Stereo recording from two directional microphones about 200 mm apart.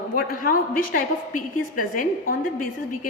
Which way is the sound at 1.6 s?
45° left (ahead or behind).